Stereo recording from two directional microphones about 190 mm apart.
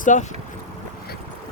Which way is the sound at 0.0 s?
40° left (ahead or behind).